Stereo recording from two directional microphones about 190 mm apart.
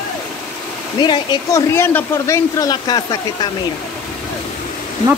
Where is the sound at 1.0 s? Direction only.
25° left (ahead or behind).